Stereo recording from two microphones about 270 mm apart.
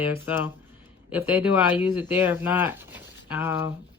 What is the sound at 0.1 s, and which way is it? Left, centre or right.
Speech, centre.